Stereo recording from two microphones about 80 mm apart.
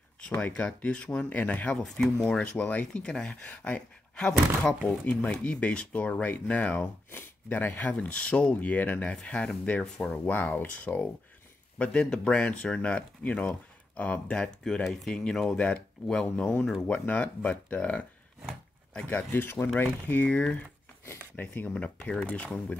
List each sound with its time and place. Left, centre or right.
0.4 s speech: centre
2.6 s speech: centre
11.8 s speech: centre